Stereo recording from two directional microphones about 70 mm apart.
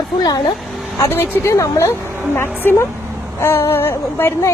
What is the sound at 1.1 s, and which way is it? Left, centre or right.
Speech, left.